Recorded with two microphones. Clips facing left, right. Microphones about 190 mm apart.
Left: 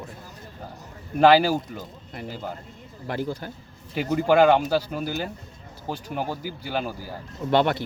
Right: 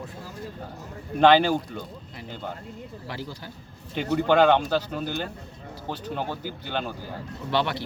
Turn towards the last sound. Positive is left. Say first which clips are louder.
# left 5 dB
turn(degrees=50)  # may be behind; listen again after turning